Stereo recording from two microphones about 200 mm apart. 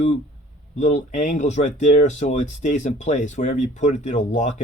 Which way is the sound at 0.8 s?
35° left (ahead or behind).